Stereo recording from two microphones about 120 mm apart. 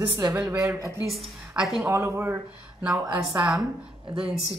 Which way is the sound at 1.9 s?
25° right (ahead or behind).